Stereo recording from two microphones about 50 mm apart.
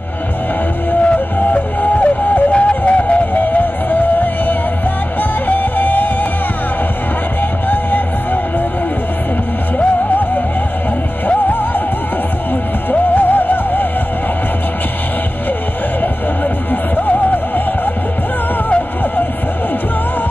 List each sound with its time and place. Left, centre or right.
1.0 s music: left
2.5 s music: left
3.5 s music: left
7.7 s music: left
11.2 s music: left
13.1 s music: left
16.9 s music: left